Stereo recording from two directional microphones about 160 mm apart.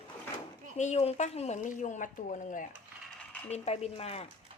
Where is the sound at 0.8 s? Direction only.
45° left (ahead or behind).